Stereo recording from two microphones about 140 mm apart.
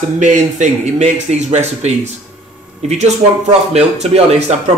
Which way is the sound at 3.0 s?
50° right (ahead or behind).